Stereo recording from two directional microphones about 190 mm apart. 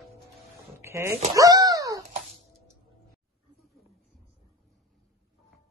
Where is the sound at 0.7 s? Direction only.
15° right (ahead or behind).